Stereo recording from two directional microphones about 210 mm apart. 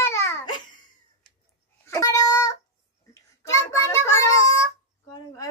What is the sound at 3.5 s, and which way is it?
Child singing, 15° left (ahead or behind).